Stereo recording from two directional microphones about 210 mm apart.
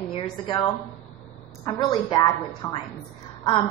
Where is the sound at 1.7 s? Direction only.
20° left (ahead or behind).